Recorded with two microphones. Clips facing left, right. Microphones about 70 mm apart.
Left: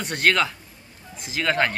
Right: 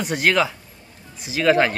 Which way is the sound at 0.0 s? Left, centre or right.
Centre.